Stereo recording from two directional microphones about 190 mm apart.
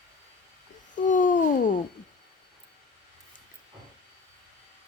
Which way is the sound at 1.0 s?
45° left (ahead or behind).